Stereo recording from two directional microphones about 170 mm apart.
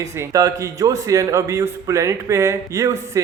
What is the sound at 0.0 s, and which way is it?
A man's voice, 20° right (ahead or behind).